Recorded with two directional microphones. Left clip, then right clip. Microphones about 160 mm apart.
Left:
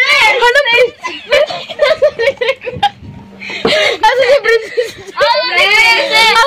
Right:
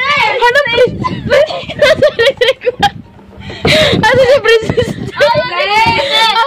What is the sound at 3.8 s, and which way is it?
Whimper, 25° right (ahead or behind).